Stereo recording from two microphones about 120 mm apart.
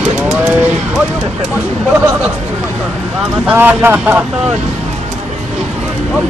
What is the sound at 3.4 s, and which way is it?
Speech, 15° right (ahead or behind).